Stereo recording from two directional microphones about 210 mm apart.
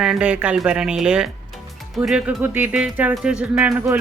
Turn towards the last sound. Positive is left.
turn(degrees=-5)  # may be behind; listen again after turning